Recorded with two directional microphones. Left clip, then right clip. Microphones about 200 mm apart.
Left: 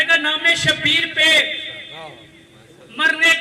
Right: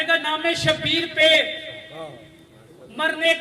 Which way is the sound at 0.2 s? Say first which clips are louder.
Left 6 dB; 55° right (ahead or behind).